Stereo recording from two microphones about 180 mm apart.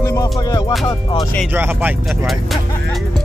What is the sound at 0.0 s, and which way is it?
Music, 20° left (ahead or behind).